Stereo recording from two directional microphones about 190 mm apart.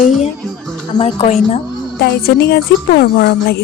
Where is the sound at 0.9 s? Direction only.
30° left (ahead or behind).